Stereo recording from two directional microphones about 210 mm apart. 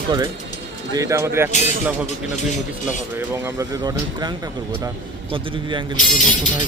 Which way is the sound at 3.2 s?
10° right (ahead or behind).